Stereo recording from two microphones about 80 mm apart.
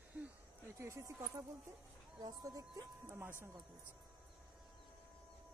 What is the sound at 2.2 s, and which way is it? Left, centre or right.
Speech, right.